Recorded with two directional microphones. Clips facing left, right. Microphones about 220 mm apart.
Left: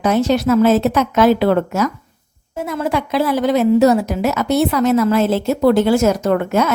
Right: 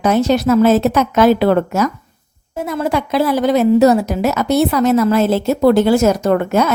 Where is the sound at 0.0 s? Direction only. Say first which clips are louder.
Right 1 dB; 40° right (ahead or behind).